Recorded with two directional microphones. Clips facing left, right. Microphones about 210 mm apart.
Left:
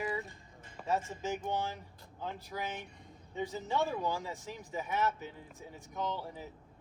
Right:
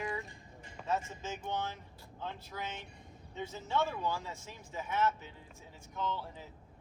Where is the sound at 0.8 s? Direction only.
5° left (ahead or behind).